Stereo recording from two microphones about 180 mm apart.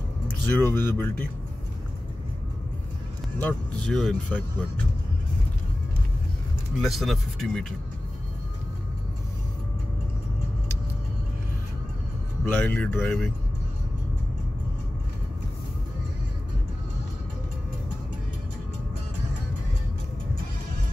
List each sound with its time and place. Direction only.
0.5 s speech: 10° left (ahead or behind)
3.3 s speech: 5° left (ahead or behind)
6.8 s speech: centre (ahead or behind)
12.4 s speech: 10° left (ahead or behind)